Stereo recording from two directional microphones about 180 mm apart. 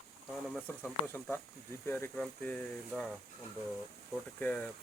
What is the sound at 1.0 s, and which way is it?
Speech, 15° left (ahead or behind).